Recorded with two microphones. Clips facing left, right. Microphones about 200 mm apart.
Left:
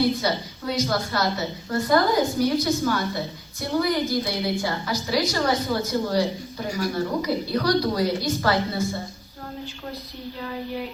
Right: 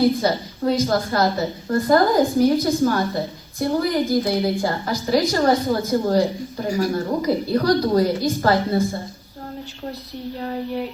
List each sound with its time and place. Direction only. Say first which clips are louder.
0.2 s a woman's voice: right 5 dB; 50° right (ahead or behind)